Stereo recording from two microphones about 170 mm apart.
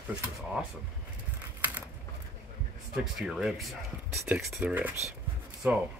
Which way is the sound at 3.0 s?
5° right (ahead or behind).